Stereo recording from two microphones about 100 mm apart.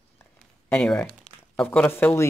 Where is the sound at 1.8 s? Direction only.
20° left (ahead or behind).